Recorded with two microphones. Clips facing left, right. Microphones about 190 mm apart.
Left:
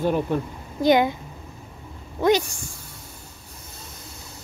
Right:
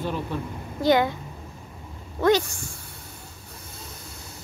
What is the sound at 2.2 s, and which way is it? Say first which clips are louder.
Speech: left 1 dB; 15° left (ahead or behind).